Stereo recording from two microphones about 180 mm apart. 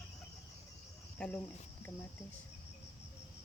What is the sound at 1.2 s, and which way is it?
Cricket, 5° left (ahead or behind).